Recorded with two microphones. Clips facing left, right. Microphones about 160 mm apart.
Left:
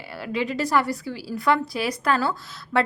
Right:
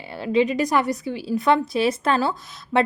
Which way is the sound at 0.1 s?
20° right (ahead or behind).